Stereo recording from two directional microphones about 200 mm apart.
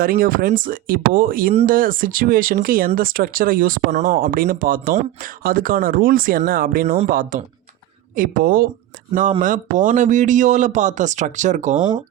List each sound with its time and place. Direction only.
0.0 s speech: 45° right (ahead or behind)
6.8 s speech: 30° right (ahead or behind)
7.1 s speech: 45° right (ahead or behind)